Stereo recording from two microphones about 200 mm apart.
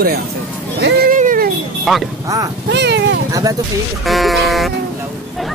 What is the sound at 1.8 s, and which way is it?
Speech, centre (ahead or behind).